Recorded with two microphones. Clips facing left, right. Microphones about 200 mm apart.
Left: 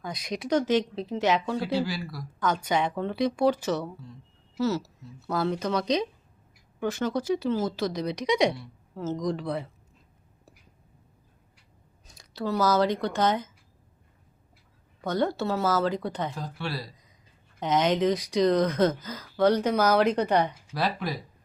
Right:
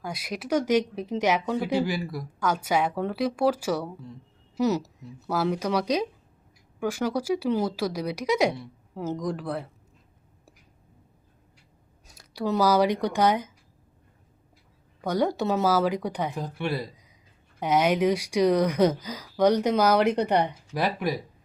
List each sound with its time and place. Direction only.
0.0 s speech: 10° right (ahead or behind)
2.4 s speech: 10° right (ahead or behind)
12.0 s speech: 5° right (ahead or behind)
15.0 s speech: 10° right (ahead or behind)